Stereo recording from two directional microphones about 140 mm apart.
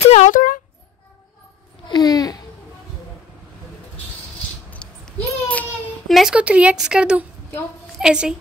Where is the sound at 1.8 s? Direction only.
30° left (ahead or behind).